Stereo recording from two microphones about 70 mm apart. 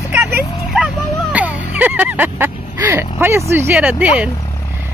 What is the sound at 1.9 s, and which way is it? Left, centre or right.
Speech, right.